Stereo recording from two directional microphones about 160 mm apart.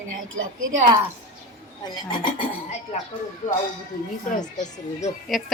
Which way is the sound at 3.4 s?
50° left (ahead or behind).